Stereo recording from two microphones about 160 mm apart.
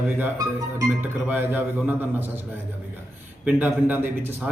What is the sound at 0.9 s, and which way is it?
A man's voice, 10° right (ahead or behind).